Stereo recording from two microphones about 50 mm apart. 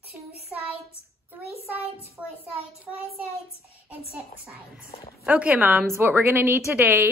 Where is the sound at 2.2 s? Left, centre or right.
Right.